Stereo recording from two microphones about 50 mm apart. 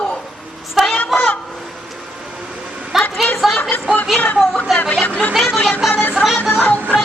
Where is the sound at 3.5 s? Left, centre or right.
Left.